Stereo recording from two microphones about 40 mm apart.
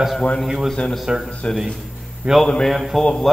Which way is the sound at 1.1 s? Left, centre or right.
Centre.